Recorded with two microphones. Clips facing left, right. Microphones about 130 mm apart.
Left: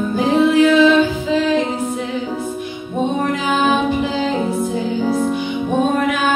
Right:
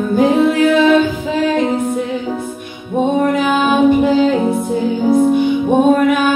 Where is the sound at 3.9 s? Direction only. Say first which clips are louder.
Right 7 dB; 55° right (ahead or behind).